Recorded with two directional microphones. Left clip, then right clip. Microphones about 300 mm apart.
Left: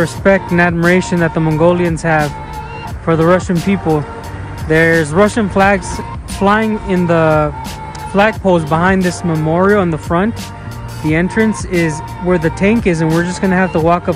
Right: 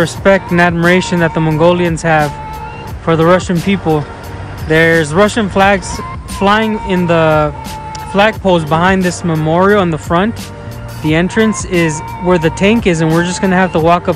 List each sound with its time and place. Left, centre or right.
0.0 s speech: centre